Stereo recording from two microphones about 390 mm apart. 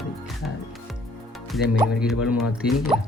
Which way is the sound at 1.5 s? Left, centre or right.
Centre.